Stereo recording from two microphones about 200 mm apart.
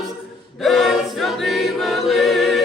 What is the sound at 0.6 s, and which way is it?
Choir, centre (ahead or behind).